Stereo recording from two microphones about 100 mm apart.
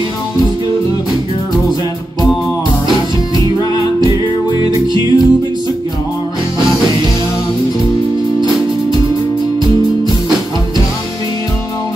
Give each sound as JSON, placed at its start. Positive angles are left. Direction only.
{"t": 4.6, "sound": "music", "side_deg": -45}